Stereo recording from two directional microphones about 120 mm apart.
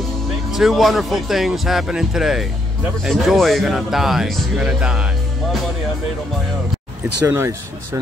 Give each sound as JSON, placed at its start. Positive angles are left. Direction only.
{"t": 0.5, "sound": "speech", "side_deg": 0}
{"t": 7.2, "sound": "speech", "side_deg": -25}